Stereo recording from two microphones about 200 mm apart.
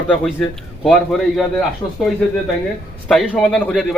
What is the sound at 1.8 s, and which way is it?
Speech, 15° left (ahead or behind).